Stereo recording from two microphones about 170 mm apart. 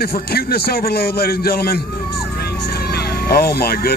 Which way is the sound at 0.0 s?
65° left (ahead or behind).